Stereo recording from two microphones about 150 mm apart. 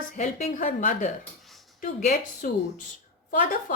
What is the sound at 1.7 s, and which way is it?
Speech, 60° left (ahead or behind).